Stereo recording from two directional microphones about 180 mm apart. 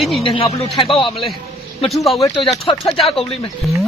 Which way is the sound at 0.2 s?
30° left (ahead or behind).